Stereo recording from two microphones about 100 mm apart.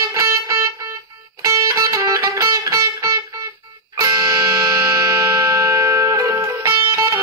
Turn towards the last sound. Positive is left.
turn(degrees=-30)  # may be behind; listen again after turning